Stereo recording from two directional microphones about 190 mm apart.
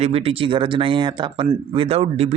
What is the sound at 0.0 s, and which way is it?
Speech, 30° right (ahead or behind).